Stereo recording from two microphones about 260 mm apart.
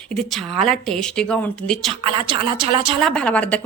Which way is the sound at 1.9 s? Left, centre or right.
Centre.